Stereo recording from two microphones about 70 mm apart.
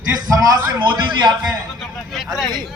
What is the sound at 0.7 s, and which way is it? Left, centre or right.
Speech, right.